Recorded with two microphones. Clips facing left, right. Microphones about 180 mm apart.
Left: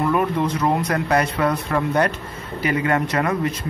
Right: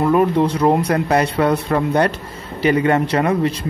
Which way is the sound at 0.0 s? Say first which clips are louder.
Right 5 dB; 30° right (ahead or behind).